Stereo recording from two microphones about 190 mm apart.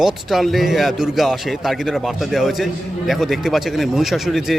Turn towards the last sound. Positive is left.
turn(degrees=0)  # may be behind; listen again after turning